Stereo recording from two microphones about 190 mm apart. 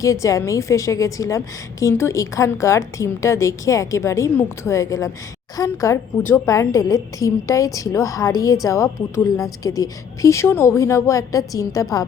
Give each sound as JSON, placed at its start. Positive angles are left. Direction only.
{"t": 0.0, "sound": "a woman's voice", "side_deg": 15}